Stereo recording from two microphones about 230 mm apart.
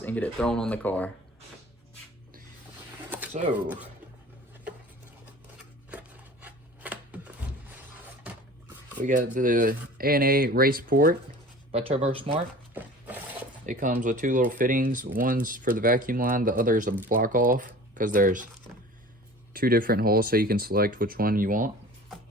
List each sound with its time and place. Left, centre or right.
0.0 s speech: centre
3.1 s a sound: centre
5.9 s a sound: centre
9.0 s speech: right
11.7 s speech: right
13.7 s speech: right
19.5 s speech: right